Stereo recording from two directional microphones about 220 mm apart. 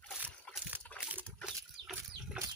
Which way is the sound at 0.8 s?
5° left (ahead or behind).